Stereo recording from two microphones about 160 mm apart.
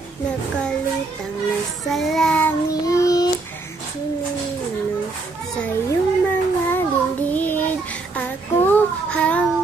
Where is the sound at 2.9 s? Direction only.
20° left (ahead or behind).